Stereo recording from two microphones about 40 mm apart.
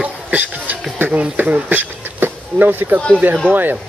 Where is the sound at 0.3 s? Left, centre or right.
Right.